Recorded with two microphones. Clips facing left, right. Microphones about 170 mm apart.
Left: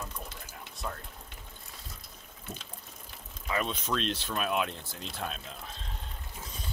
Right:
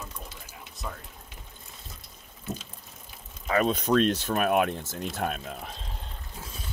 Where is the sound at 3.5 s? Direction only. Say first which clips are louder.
Right 8 dB; 45° right (ahead or behind).